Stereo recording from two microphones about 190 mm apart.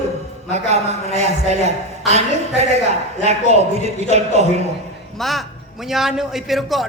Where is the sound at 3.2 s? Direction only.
35° right (ahead or behind).